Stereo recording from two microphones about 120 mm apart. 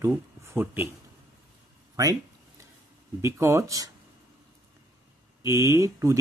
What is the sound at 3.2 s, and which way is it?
Speech, 25° right (ahead or behind).